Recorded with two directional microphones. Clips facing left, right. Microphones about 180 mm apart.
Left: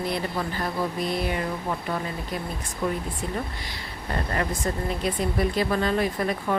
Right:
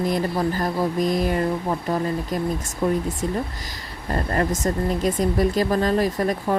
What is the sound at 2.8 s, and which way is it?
Speech, 40° right (ahead or behind).